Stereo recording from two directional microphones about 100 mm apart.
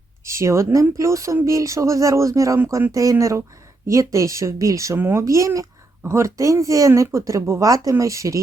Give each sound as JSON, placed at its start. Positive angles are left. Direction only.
{"t": 0.3, "sound": "speech", "side_deg": -30}